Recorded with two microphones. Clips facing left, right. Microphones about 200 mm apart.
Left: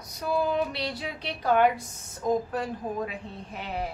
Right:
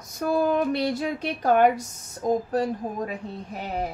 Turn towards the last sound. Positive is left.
turn(degrees=-40)  # may be behind; listen again after turning